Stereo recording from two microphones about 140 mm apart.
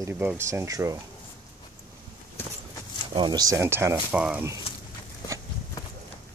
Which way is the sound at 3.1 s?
30° right (ahead or behind).